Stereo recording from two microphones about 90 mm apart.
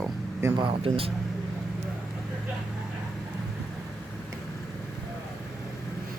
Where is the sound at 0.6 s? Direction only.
90° right.